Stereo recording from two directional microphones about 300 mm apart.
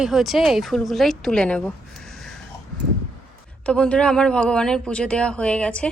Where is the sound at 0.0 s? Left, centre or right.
Centre.